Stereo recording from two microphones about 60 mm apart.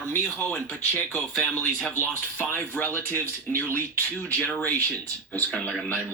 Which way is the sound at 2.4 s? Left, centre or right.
Left.